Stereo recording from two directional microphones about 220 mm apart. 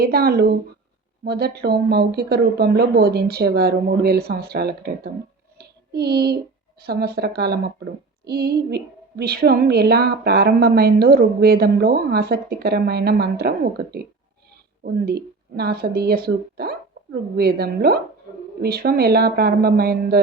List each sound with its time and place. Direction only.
0.0 s a woman's voice: 45° right (ahead or behind)
5.5 s child singing: 45° right (ahead or behind)
6.8 s a woman's voice: 45° right (ahead or behind)
15.0 s a woman's voice: 45° right (ahead or behind)